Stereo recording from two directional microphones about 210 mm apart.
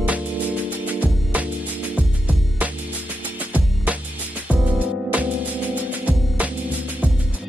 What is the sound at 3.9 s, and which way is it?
Music, 5° right (ahead or behind).